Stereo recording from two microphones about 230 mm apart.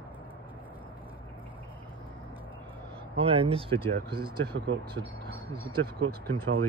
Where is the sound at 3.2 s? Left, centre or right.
Right.